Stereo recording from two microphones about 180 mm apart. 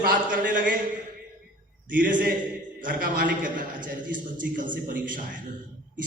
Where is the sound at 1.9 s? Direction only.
50° right (ahead or behind).